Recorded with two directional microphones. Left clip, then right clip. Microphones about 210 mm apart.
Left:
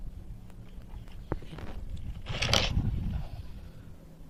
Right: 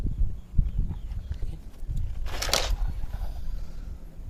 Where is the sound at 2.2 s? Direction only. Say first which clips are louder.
Even; 20° right (ahead or behind).